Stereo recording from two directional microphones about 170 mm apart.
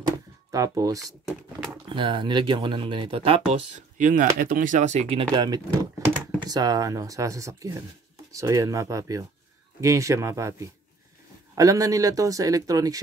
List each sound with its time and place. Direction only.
0.5 s speech: 20° right (ahead or behind); by 5.2 s 40° right (ahead or behind)
5.2 s speech: 25° right (ahead or behind)